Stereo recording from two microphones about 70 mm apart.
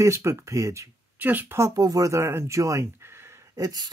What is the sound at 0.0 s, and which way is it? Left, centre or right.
Speech, right.